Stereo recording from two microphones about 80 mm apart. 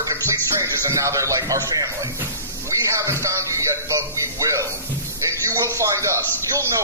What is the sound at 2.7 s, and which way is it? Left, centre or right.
A man's voice, right.